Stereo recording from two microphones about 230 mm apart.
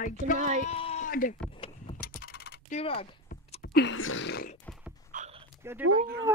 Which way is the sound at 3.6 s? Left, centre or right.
Left.